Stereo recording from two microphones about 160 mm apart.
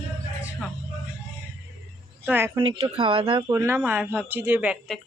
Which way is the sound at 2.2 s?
15° right (ahead or behind).